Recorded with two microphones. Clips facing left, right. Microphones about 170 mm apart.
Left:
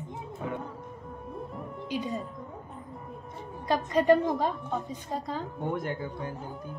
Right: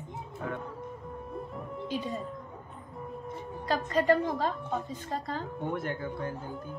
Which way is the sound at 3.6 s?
20° left (ahead or behind).